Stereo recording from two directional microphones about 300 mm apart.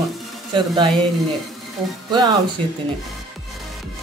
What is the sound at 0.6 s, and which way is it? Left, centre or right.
Speech, centre.